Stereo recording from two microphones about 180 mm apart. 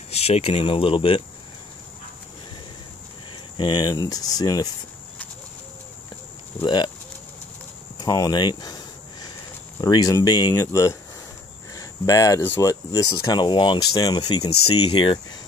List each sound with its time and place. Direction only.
0.1 s speech: 35° left (ahead or behind)
3.5 s speech: 25° left (ahead or behind)
6.6 s speech: 25° left (ahead or behind)
8.0 s a sound: 20° left (ahead or behind)
9.8 s speech: 20° left (ahead or behind)